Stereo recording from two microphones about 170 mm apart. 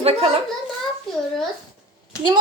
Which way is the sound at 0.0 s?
35° right (ahead or behind).